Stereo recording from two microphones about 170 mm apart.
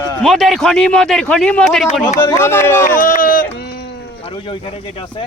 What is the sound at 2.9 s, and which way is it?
Speech, 55° left (ahead or behind).